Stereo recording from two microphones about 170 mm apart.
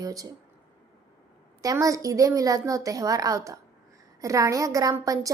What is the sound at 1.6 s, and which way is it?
A woman's voice, 20° right (ahead or behind).